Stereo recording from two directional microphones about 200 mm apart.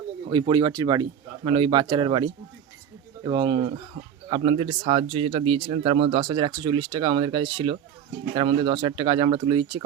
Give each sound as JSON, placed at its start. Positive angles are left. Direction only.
{"t": 0.3, "sound": "speech", "side_deg": -25}